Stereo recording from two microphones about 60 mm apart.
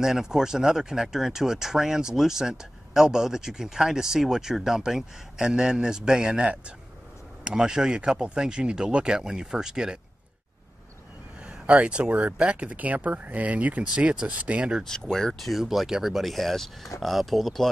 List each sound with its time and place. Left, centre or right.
0.0 s speech: centre
11.4 s speech: centre
14.9 s speech: centre